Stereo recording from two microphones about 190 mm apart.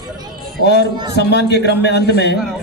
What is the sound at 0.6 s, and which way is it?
A man's voice, 60° left (ahead or behind).